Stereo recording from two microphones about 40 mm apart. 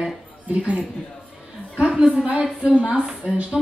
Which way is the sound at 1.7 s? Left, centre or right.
Right.